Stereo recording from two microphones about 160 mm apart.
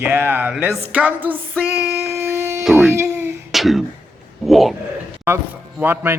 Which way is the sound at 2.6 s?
Centre (ahead or behind).